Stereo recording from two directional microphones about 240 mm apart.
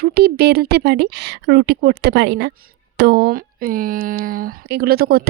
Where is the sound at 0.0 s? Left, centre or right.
Right.